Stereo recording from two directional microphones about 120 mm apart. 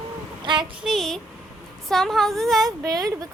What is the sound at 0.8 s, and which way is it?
A woman's voice, centre (ahead or behind).